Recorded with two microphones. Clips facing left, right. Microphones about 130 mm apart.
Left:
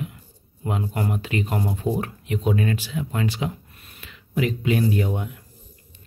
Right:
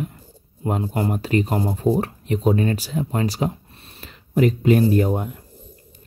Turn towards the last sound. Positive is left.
turn(degrees=-40)  # may be behind; listen again after turning